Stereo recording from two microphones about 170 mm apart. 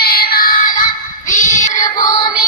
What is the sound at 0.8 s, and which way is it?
Child singing, 50° left (ahead or behind).